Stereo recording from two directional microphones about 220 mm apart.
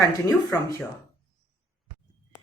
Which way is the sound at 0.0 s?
15° left (ahead or behind).